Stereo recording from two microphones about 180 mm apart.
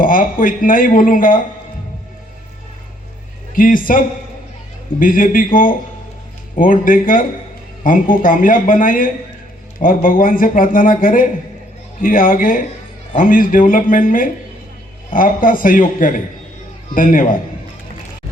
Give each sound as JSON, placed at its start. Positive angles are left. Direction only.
{"t": 0.0, "sound": "a man's voice", "side_deg": 50}
{"t": 3.5, "sound": "a man's voice", "side_deg": 50}